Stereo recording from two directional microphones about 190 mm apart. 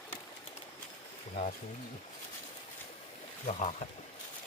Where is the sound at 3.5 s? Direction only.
35° left (ahead or behind).